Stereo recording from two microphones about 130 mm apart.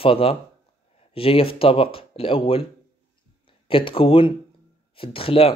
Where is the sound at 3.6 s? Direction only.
45° left (ahead or behind).